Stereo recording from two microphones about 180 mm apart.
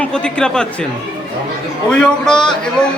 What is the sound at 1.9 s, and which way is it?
Speech, 5° left (ahead or behind).